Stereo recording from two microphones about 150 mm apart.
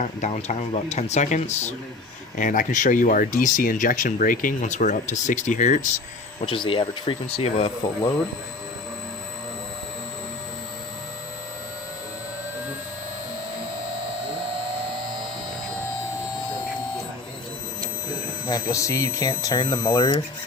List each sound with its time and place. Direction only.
0.0 s speech: 55° left (ahead or behind)
2.3 s speech: 60° left (ahead or behind)
6.4 s speech: 35° left (ahead or behind)
18.4 s speech: 25° left (ahead or behind)